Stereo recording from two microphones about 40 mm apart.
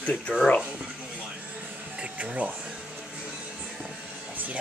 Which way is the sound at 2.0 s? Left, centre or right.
Right.